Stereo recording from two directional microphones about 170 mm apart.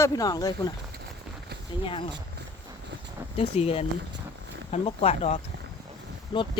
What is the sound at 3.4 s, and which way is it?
Speech, 35° left (ahead or behind).